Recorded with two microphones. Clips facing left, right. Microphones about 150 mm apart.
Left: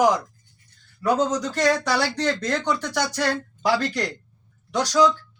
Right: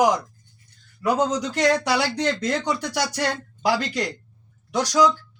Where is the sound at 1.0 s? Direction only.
15° right (ahead or behind).